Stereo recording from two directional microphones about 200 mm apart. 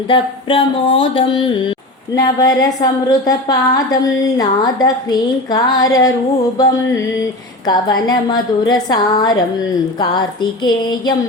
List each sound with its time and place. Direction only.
0.1 s a woman's voice: 25° left (ahead or behind)
7.7 s a woman's voice: 20° left (ahead or behind)